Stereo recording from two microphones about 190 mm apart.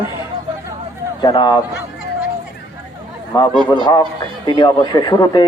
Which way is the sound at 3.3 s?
25° left (ahead or behind).